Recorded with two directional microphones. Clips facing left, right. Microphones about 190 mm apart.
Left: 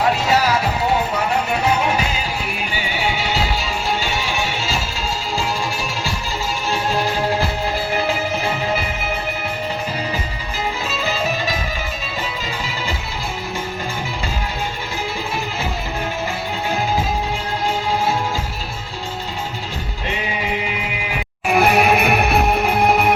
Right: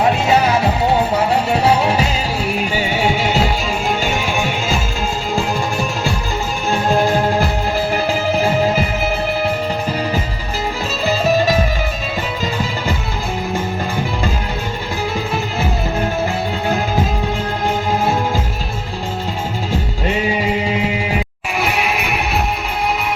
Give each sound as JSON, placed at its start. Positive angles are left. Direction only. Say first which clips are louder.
{"t": 0.0, "sound": "music", "louder": "right 3 dB", "side_deg": -25}
{"t": 2.7, "sound": "music", "louder": "right 4 dB", "side_deg": -45}
{"t": 6.7, "sound": "music", "louder": "right 6 dB", "side_deg": -50}
{"t": 21.5, "sound": "music", "louder": "left 5 dB", "side_deg": 55}